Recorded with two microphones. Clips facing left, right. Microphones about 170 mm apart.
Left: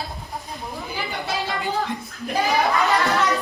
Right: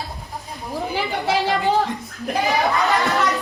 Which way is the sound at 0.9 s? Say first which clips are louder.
Right 6 dB; 80° right.